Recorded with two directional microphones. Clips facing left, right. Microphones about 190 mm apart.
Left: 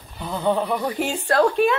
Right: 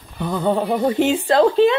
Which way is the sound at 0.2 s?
50° right (ahead or behind).